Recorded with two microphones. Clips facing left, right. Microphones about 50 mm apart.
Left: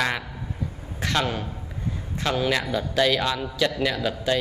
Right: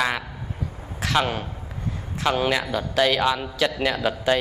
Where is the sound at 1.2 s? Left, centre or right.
Right.